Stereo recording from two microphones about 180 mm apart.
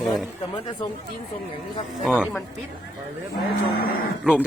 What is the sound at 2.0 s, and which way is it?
Speech, 5° right (ahead or behind).